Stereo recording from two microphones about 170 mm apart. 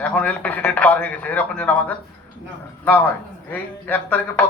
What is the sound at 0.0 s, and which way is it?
A man's voice, 10° left (ahead or behind).